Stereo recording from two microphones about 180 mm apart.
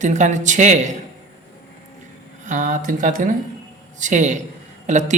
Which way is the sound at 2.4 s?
45° right (ahead or behind).